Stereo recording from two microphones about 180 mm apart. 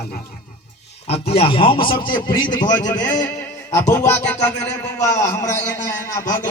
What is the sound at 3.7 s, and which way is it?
Music, 15° left (ahead or behind).